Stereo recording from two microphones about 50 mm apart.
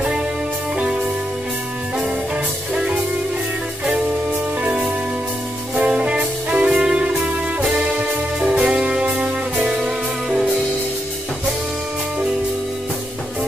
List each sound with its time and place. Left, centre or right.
4.6 s music: centre
8.4 s music: right